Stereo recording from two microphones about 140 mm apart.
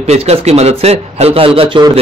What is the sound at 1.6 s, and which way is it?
Speech, 35° right (ahead or behind).